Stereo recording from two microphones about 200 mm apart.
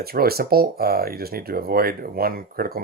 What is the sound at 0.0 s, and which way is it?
Speech, 50° right (ahead or behind).